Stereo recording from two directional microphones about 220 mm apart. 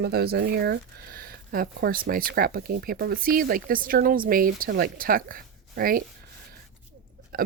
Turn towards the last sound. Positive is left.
turn(degrees=-40)  # may be behind; listen again after turning